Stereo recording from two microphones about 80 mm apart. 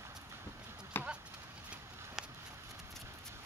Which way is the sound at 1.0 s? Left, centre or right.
Left.